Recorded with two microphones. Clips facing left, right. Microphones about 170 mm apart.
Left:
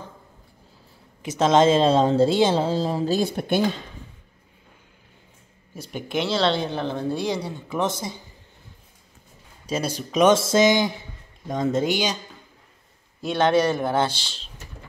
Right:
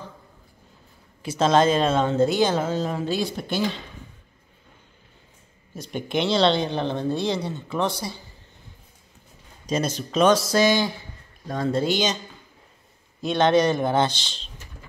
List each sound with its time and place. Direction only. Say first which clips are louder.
1.2 s speech: left 2 dB; 20° left (ahead or behind); by 3.3 s 35° left (ahead or behind)
3.3 s speech: left 4 dB; 55° left (ahead or behind)
5.8 s speech: right 1 dB; 5° left (ahead or behind); by 8.2 s 20° left (ahead or behind)
9.7 s speech: right 1 dB; 10° left (ahead or behind)
13.2 s speech: right 1 dB; 10° left (ahead or behind)